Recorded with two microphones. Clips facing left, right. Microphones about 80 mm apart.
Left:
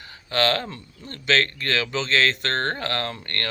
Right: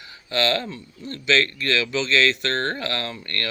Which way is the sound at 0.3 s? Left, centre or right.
Left.